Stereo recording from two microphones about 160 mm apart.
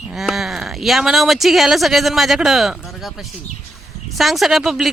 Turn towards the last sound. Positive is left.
turn(degrees=0)  # may be behind; listen again after turning